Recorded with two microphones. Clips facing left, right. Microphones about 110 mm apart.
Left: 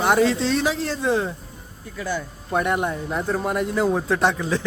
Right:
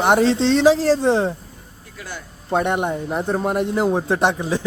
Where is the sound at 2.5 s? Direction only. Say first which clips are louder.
Right 2 dB; 25° right (ahead or behind).